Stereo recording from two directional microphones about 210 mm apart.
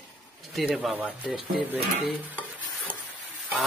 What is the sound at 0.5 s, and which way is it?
Speech, centre (ahead or behind).